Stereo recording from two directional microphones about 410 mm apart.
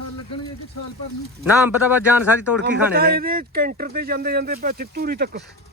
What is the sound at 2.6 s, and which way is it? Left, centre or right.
Speech, right.